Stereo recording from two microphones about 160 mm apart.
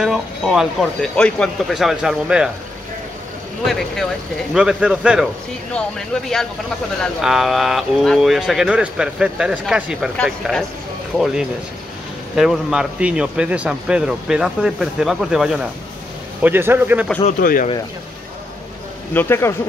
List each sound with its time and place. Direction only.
0.0 s speech: 5° right (ahead or behind)
4.6 s speech: 5° right (ahead or behind)
12.4 s a man's voice: centre (ahead or behind)
17.4 s speech: 60° left (ahead or behind)
19.1 s speech: 15° left (ahead or behind)